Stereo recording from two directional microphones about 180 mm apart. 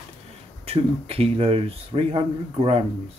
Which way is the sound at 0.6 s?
35° right (ahead or behind).